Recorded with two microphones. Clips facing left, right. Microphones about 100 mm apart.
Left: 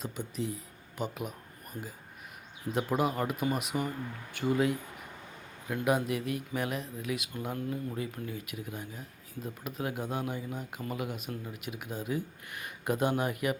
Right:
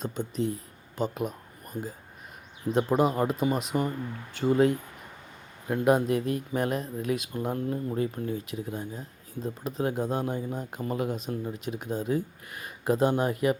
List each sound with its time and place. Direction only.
0.3 s speech: 35° right (ahead or behind)
1.7 s speech: 25° right (ahead or behind)